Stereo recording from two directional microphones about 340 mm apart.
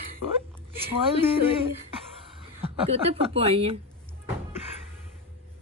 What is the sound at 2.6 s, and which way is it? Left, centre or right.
A woman's voice, centre.